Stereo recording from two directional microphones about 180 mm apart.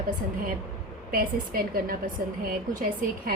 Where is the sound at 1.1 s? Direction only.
55° right (ahead or behind).